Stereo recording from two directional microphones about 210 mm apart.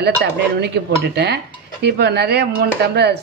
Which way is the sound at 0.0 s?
55° right (ahead or behind).